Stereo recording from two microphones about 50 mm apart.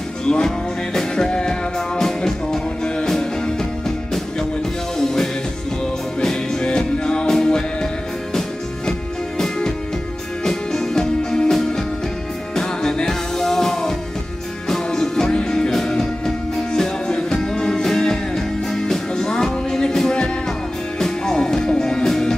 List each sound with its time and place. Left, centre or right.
0.2 s music: centre
4.9 s music: centre
9.4 s music: centre